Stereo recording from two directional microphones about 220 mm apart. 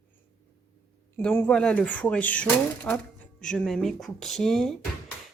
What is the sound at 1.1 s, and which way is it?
Speech, 10° left (ahead or behind).